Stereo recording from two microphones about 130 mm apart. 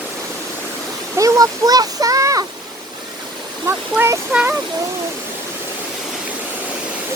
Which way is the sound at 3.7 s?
20° right (ahead or behind).